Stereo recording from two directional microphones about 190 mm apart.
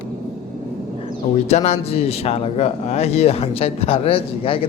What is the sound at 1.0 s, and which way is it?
A man's voice, 35° left (ahead or behind).